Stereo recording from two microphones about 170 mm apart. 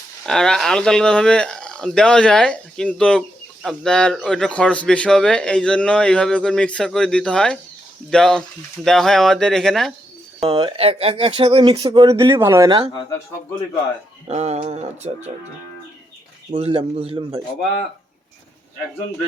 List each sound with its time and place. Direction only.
0.3 s speech: 5° left (ahead or behind)
10.5 s speech: 25° right (ahead or behind)
12.6 s speech: 30° right (ahead or behind)
14.3 s a man's voice: 40° right (ahead or behind)
16.5 s a man's voice: 35° right (ahead or behind)